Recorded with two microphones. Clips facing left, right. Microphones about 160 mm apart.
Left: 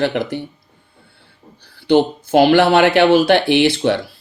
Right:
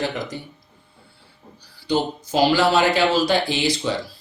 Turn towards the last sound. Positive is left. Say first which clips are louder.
# left 8 dB
turn(degrees=65)  # may be behind; listen again after turning